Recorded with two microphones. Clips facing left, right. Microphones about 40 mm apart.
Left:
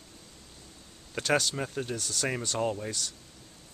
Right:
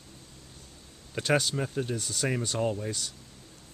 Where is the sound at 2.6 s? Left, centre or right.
Centre.